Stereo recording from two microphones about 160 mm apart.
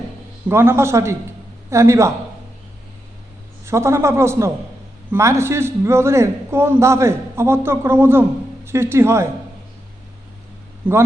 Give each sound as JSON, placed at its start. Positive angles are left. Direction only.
{"t": 0.4, "sound": "a man's voice", "side_deg": -15}
{"t": 3.7, "sound": "a man's voice", "side_deg": -15}
{"t": 10.8, "sound": "a man's voice", "side_deg": -10}